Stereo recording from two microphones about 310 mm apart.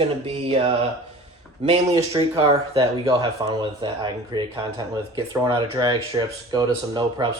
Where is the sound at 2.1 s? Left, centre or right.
Centre.